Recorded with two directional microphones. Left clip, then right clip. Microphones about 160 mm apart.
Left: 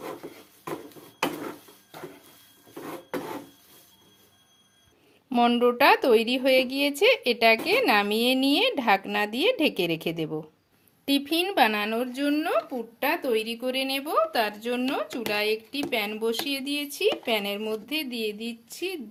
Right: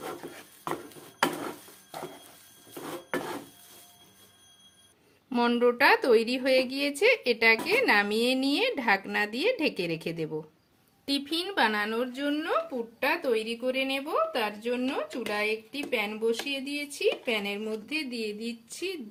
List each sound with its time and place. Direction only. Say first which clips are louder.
5.3 s a woman's voice: left 3 dB; 30° left (ahead or behind)